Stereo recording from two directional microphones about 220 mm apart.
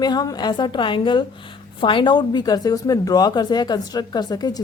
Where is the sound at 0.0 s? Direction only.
20° left (ahead or behind).